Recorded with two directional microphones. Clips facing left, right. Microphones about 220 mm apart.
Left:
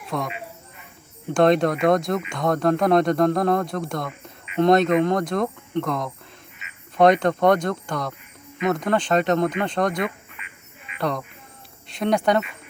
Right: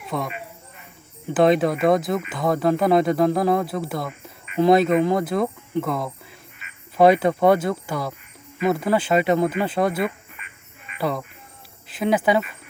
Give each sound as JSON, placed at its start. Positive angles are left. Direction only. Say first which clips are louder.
{"t": 0.1, "sound": "speech", "louder": "even", "side_deg": 0}
{"t": 10.4, "sound": "quack", "louder": "left 2 dB", "side_deg": -45}
{"t": 10.9, "sound": "speech", "louder": "right 1 dB", "side_deg": -5}